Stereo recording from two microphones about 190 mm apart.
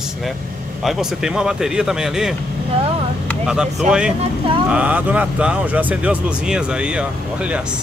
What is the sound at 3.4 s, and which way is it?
Speech, 5° right (ahead or behind).